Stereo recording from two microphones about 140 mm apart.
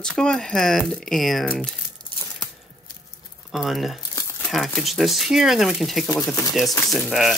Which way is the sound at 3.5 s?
Centre (ahead or behind).